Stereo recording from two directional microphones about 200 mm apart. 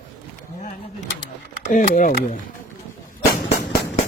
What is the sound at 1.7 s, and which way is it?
Speech, 40° left (ahead or behind).